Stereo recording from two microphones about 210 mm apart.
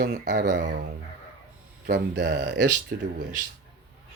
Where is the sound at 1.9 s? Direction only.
55° right (ahead or behind).